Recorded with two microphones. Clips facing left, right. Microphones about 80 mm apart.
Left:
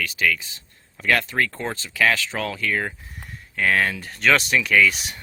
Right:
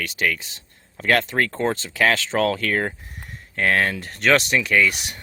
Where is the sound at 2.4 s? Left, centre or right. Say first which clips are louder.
Right 4 dB; right.